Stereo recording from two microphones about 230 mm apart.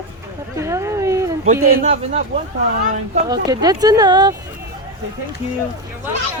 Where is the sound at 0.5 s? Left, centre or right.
Centre.